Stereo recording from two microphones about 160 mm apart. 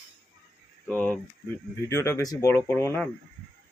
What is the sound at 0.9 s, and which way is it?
Speech, 10° left (ahead or behind).